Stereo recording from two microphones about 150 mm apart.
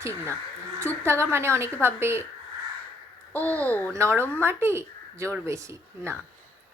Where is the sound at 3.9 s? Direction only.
20° right (ahead or behind).